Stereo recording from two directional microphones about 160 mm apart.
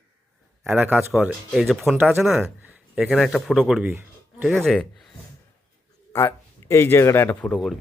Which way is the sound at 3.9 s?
15° right (ahead or behind).